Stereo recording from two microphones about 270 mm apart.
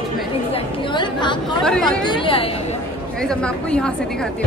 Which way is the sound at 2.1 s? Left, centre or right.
Centre.